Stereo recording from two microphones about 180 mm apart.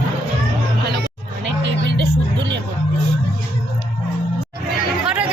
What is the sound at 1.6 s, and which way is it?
Music, 75° right (ahead or behind).